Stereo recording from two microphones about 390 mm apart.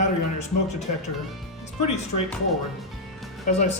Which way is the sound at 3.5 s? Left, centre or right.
Centre.